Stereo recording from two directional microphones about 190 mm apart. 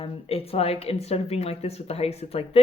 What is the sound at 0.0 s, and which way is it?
Speech, 30° left (ahead or behind).